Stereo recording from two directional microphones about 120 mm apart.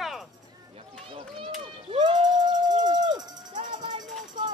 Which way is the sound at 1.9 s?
45° right (ahead or behind).